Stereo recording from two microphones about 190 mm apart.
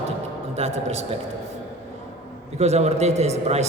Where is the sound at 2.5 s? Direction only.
35° right (ahead or behind).